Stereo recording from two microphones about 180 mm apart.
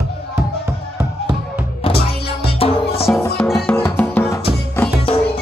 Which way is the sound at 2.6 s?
30° left (ahead or behind).